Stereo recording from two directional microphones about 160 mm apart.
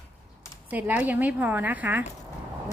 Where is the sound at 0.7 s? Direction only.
10° right (ahead or behind).